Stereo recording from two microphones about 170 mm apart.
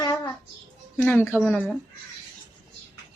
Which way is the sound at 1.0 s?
10° left (ahead or behind).